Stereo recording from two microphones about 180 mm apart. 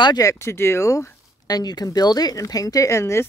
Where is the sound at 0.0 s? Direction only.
20° left (ahead or behind).